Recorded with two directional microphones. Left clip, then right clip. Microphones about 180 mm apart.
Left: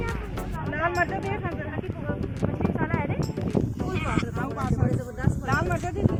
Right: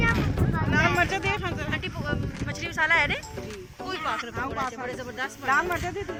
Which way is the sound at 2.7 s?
30° left (ahead or behind).